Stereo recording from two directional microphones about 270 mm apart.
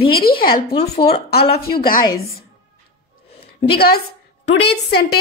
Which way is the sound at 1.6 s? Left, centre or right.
Left.